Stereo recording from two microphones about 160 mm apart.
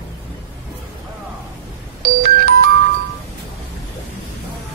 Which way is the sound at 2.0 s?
70° right (ahead or behind).